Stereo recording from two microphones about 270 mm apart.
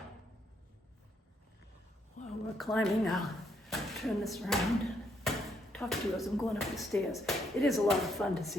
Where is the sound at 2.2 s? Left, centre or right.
Left.